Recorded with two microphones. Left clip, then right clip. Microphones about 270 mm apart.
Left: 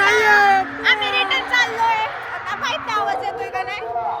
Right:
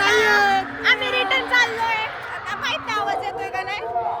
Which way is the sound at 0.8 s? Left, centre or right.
Right.